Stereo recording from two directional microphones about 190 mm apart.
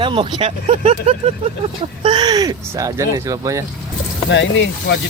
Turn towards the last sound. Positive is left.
turn(degrees=70)  # may be behind; listen again after turning